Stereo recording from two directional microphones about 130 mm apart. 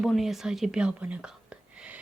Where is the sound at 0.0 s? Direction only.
Centre (ahead or behind).